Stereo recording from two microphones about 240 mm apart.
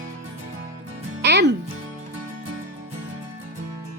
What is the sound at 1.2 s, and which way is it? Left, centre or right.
Music, right.